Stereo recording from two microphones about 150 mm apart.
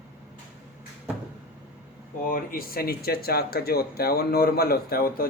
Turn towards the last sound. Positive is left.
turn(degrees=80)